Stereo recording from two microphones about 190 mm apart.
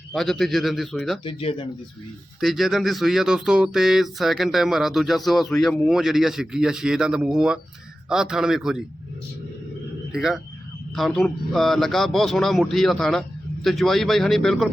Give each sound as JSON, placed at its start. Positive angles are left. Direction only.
{"t": 0.1, "sound": "speech", "side_deg": 0}
{"t": 1.2, "sound": "speech", "side_deg": 30}
{"t": 2.4, "sound": "speech", "side_deg": 0}
{"t": 10.1, "sound": "speech", "side_deg": 0}